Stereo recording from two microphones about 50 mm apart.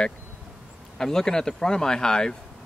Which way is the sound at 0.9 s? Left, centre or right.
Centre.